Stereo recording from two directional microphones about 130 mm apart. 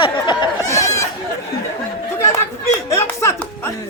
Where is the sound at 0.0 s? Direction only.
35° left (ahead or behind).